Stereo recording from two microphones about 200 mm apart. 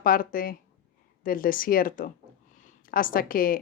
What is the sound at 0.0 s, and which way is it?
A woman's voice, 45° left (ahead or behind).